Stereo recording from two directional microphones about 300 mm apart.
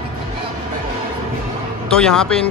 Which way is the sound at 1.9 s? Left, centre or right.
Centre.